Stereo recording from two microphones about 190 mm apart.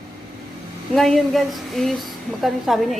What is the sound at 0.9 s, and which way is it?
A woman's voice, centre (ahead or behind).